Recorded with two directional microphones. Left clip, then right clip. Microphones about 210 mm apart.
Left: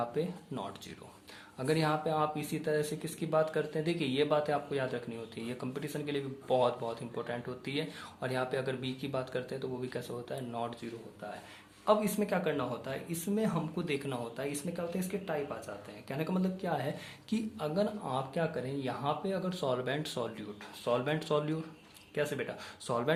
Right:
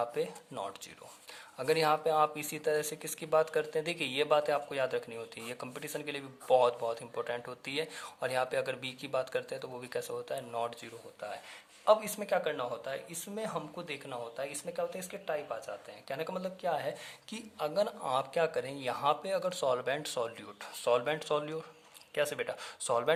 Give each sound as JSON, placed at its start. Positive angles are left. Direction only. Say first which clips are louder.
{"t": 0.0, "sound": "speech", "louder": "right 1 dB", "side_deg": -40}
{"t": 11.9, "sound": "speech", "louder": "right 2 dB", "side_deg": -25}